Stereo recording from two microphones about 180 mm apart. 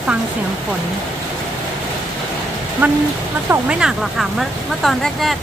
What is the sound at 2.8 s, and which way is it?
Speech, 10° right (ahead or behind).